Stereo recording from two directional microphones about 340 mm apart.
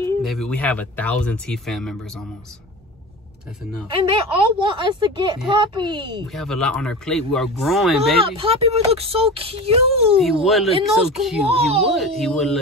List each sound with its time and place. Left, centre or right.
0.2 s speech: centre
3.8 s speech: centre
6.2 s speech: centre
8.2 s speech: centre
10.4 s speech: centre
11.4 s speech: centre
11.9 s speech: centre